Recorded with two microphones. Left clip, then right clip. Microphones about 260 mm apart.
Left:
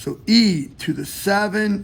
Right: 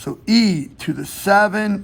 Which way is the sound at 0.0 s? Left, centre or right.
Right.